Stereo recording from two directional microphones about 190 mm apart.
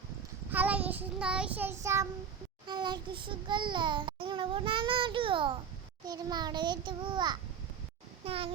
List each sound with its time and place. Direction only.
0.5 s child singing: 10° right (ahead or behind)
2.6 s a child's voice: 25° right (ahead or behind)